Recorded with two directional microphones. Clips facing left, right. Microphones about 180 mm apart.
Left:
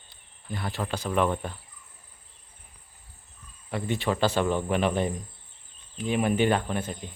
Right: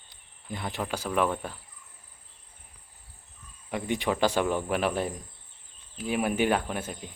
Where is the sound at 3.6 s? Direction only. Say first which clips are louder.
Left 1 dB; 15° right (ahead or behind).